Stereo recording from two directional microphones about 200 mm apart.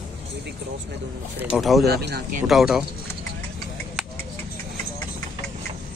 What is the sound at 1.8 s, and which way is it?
Speech, 55° right (ahead or behind).